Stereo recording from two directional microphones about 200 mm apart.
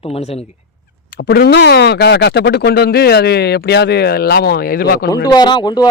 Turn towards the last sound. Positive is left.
turn(degrees=20)  # may be behind; listen again after turning